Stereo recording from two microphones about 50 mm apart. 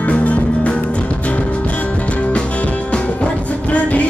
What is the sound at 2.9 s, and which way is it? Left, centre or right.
Music, left.